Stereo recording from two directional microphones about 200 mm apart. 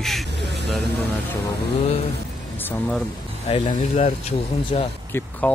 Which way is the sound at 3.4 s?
25° left (ahead or behind).